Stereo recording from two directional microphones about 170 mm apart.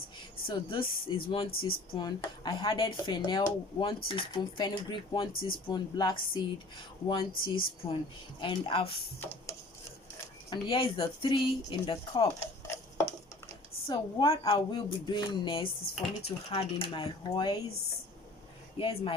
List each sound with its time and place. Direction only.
0.4 s a woman's voice: 30° left (ahead or behind)
1.5 s speech: 60° left (ahead or behind)
2.0 s a woman's voice: 25° left (ahead or behind)
9.2 s a sound: 10° left (ahead or behind)
10.5 s speech: 30° left (ahead or behind); by 12.8 s 15° left (ahead or behind)
13.8 s a woman's voice: 30° left (ahead or behind)
18.8 s a woman's voice: 30° left (ahead or behind)